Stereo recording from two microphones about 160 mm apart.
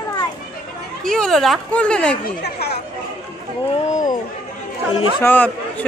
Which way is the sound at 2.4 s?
90° left.